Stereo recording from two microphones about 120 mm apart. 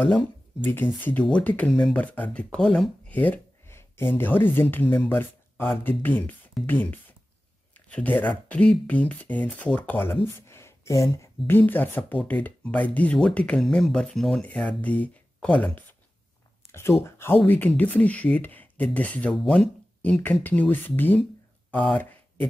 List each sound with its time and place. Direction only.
1.2 s speech: 10° left (ahead or behind)
17.0 s speech: 20° left (ahead or behind)